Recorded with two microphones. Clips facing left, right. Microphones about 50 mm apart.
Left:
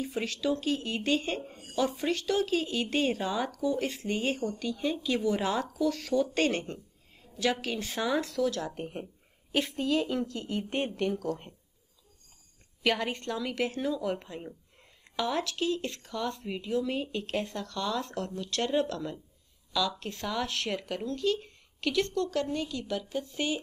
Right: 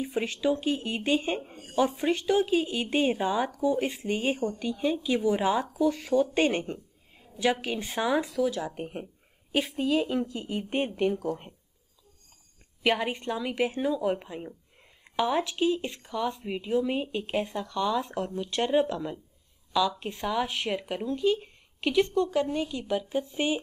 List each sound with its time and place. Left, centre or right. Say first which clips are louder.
0.0 s speech: right 3 dB; centre
12.8 s speech: right 2 dB; centre